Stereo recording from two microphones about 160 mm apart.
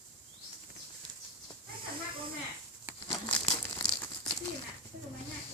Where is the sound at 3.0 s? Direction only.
30° left (ahead or behind).